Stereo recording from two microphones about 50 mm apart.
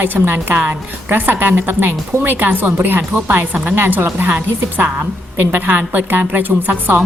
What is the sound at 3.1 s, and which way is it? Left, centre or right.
Speech, right.